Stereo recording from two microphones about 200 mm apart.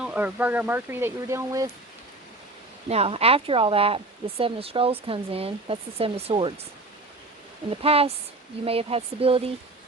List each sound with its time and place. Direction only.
0.0 s speech: 5° right (ahead or behind)
2.9 s speech: 30° right (ahead or behind)
7.7 s speech: 30° right (ahead or behind)